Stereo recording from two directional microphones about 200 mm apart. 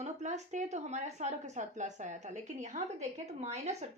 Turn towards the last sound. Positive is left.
turn(degrees=-35)  # may be behind; listen again after turning